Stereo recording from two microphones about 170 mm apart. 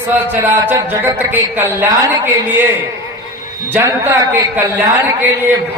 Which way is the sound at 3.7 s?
15° right (ahead or behind).